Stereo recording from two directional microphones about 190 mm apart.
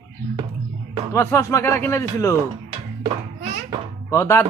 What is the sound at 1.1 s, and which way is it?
A man's voice, 15° left (ahead or behind).